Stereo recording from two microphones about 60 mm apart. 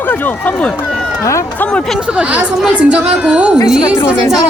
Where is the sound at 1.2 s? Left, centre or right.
Left.